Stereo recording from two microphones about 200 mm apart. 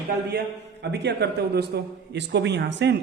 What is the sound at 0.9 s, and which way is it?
A man's voice, 60° right (ahead or behind).